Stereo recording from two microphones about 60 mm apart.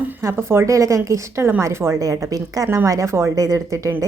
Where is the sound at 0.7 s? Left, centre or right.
Right.